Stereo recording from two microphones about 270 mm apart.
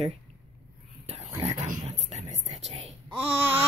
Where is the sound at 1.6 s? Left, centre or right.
Right.